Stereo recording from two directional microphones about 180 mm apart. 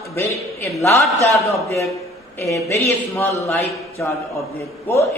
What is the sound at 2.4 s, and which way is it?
A man's voice, 15° left (ahead or behind).